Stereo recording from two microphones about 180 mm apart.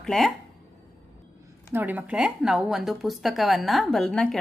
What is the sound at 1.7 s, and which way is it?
Speech, 10° right (ahead or behind).